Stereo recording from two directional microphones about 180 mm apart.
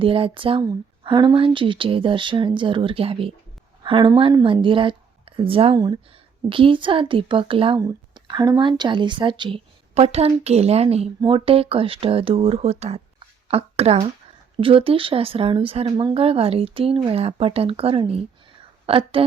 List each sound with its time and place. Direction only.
0.0 s speech: 30° right (ahead or behind)